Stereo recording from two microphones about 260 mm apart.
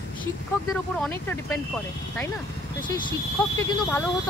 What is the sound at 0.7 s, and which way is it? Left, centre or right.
Speech, centre.